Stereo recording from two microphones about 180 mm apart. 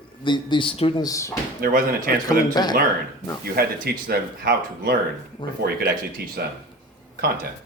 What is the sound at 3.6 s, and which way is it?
Speech, 60° right (ahead or behind).